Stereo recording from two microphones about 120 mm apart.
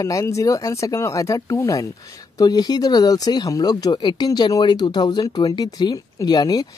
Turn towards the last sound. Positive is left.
turn(degrees=35)  # may be behind; listen again after turning